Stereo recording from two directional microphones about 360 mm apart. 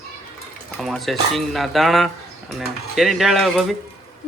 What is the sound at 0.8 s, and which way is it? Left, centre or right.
Speech, centre.